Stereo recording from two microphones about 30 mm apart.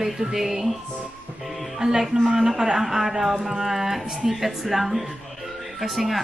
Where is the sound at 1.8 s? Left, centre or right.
Centre.